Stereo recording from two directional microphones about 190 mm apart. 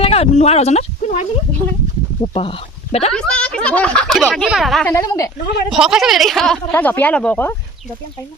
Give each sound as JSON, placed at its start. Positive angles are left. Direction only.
{"t": 0.0, "sound": "speech", "side_deg": 30}
{"t": 3.1, "sound": "speech", "side_deg": 5}
{"t": 4.9, "sound": "speech", "side_deg": 15}
{"t": 5.7, "sound": "speech", "side_deg": 0}